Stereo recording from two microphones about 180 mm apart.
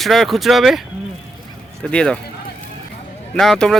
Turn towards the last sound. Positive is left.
turn(degrees=5)  # may be behind; listen again after turning